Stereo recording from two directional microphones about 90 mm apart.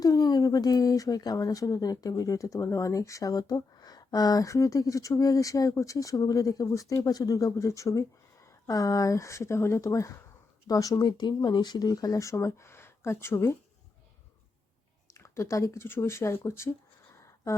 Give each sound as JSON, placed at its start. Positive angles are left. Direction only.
{"t": 0.0, "sound": "a woman's voice", "side_deg": 45}
{"t": 15.2, "sound": "a woman's voice", "side_deg": 35}